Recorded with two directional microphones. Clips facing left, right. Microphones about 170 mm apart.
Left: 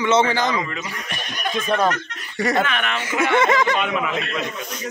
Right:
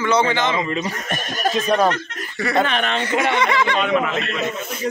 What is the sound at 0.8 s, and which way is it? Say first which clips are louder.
Speech: right 6 dB; 45° right (ahead or behind).